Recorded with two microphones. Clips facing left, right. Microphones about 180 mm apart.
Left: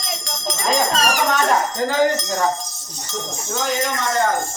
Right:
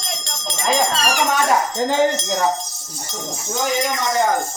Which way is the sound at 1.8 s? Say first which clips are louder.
Even; 25° right (ahead or behind).